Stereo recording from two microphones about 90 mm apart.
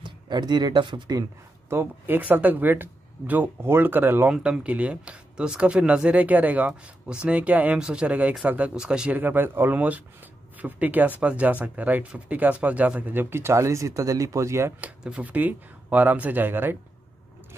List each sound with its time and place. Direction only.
0.0 s speech: 55° right (ahead or behind)
1.7 s speech: 25° right (ahead or behind)
4.3 s speech: 10° right (ahead or behind); by 14.7 s 35° right (ahead or behind)
14.8 s speech: 15° right (ahead or behind)